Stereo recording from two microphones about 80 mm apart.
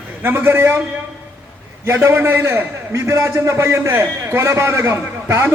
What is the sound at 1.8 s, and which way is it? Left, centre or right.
A man's voice, right.